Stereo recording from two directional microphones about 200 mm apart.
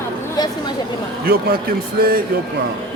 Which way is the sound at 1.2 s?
50° right (ahead or behind).